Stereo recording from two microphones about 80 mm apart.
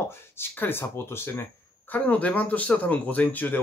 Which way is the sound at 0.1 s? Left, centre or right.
Left.